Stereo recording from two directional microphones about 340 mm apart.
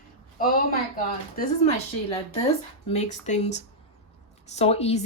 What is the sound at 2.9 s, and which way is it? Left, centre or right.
A woman's voice, centre.